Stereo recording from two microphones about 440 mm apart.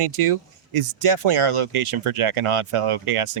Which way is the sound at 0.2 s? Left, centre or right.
Right.